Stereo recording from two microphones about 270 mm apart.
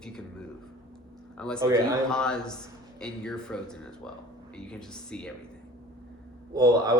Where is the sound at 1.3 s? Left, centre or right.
Centre.